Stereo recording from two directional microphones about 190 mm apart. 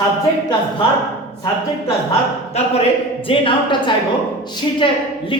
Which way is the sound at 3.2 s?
25° left (ahead or behind).